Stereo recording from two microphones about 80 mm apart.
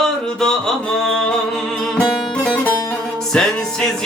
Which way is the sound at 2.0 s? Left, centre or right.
Centre.